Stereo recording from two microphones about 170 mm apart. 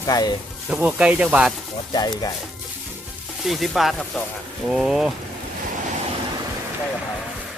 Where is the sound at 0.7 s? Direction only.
10° right (ahead or behind).